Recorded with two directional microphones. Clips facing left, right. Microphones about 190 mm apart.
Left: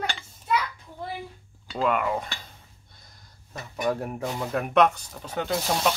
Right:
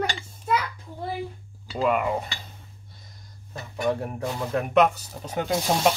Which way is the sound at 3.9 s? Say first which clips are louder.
Right 1 dB; centre (ahead or behind).